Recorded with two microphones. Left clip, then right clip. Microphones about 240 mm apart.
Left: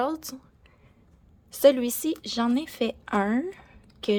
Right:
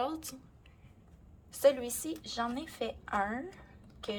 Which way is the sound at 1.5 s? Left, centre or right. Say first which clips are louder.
Left 8 dB; left.